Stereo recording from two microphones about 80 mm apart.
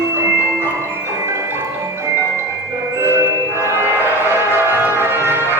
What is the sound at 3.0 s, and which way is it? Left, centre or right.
Music, right.